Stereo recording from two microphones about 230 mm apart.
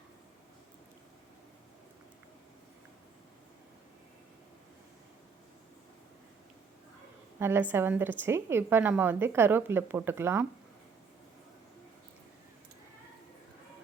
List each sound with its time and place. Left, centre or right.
7.3 s a woman's voice: centre